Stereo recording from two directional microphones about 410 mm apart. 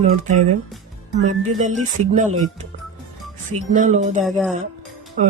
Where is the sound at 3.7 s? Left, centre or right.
Centre.